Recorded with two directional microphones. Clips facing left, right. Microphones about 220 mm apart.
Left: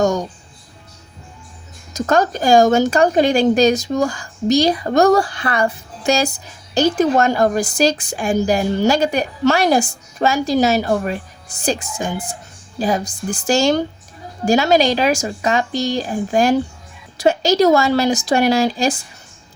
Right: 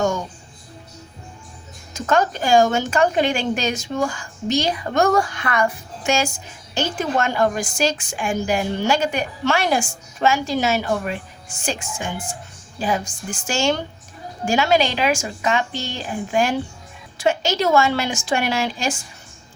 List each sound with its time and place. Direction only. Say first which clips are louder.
0.0 s speech: left 4 dB; 40° left (ahead or behind)
1.9 s a woman's voice: left 3 dB; 40° left (ahead or behind)